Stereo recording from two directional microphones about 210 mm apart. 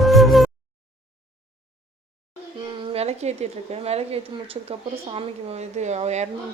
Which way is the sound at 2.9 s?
30° right (ahead or behind).